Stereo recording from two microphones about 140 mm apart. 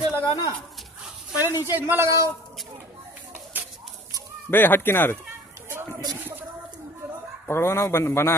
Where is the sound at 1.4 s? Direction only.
15° right (ahead or behind).